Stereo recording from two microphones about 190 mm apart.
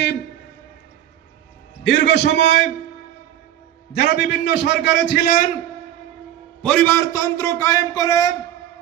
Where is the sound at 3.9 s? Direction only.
65° left (ahead or behind).